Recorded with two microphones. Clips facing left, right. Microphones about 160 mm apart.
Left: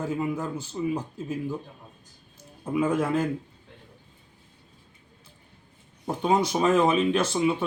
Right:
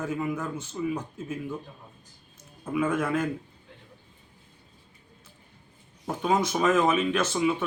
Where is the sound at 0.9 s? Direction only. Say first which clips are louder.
Left 3 dB; 35° left (ahead or behind).